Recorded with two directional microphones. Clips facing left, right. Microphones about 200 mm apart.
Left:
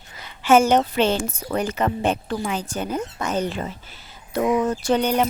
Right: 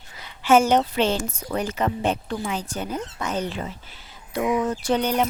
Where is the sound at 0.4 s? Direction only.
50° left (ahead or behind).